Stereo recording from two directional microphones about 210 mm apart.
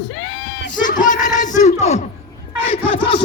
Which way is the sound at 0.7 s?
40° left (ahead or behind).